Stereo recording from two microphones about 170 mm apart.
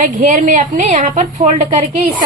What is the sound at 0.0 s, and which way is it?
A woman's voice, 50° right (ahead or behind).